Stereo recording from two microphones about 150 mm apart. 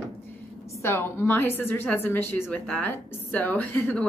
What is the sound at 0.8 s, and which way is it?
A woman's voice, 15° left (ahead or behind).